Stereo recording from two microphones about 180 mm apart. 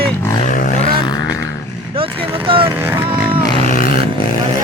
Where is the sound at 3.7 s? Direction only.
50° left (ahead or behind).